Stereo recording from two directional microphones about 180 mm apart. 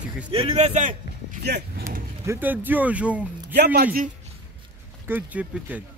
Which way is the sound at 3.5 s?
65° right (ahead or behind).